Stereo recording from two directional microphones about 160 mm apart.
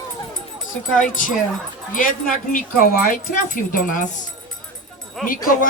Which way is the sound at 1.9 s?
60° left (ahead or behind).